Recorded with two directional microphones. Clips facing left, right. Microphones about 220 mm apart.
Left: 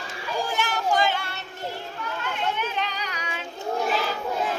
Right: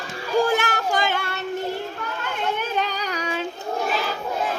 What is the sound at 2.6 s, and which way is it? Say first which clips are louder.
Child singing: right 4 dB; 40° right (ahead or behind).